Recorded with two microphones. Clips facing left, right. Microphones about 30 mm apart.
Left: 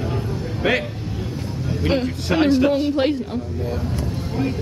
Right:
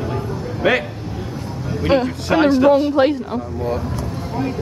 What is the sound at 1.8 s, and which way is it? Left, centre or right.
A man's voice, centre.